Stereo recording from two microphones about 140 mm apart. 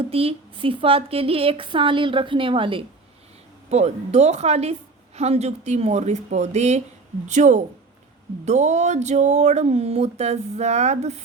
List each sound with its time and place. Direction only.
0.0 s speech: 45° right (ahead or behind)
3.7 s a woman's voice: 50° right (ahead or behind)